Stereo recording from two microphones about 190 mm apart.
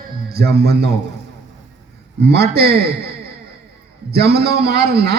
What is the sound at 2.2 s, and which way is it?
A man's voice, 60° right (ahead or behind).